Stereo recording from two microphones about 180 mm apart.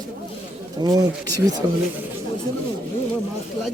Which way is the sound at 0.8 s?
20° right (ahead or behind).